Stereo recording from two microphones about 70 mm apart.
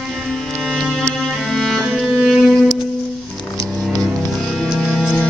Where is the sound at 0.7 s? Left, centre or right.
Centre.